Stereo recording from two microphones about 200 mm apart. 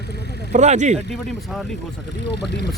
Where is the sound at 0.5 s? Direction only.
35° right (ahead or behind).